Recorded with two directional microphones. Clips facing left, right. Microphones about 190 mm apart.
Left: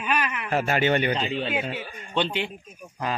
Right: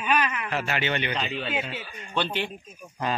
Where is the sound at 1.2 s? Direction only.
30° left (ahead or behind).